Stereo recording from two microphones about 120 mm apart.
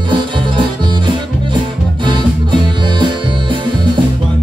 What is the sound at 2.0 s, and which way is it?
Music, 40° right (ahead or behind).